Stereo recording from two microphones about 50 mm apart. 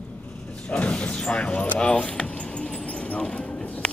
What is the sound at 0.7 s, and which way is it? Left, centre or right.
Speech, left.